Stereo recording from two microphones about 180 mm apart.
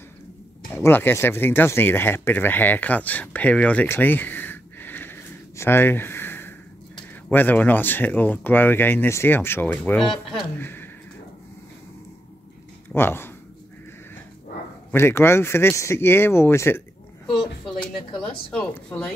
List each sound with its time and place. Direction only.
0.7 s speech: 10° left (ahead or behind)
12.9 s speech: 10° left (ahead or behind)
14.9 s speech: 15° left (ahead or behind)
18.5 s speech: 5° left (ahead or behind)